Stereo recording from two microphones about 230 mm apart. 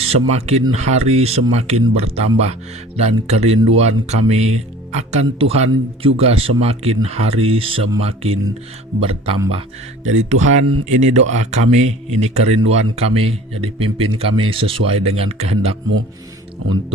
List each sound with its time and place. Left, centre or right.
0.0 s speech: right
10.6 s speech: right
10.8 s speech: right